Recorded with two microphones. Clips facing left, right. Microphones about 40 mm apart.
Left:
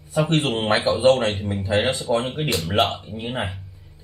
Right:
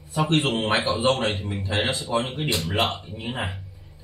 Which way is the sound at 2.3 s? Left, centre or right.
Centre.